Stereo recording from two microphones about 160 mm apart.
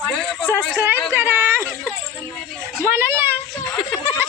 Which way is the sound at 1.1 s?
15° right (ahead or behind).